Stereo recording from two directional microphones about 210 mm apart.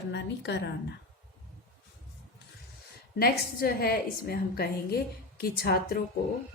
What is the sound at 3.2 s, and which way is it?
A woman's voice, 45° left (ahead or behind).